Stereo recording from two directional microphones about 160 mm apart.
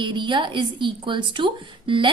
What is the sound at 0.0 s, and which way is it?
A woman's voice, 30° right (ahead or behind).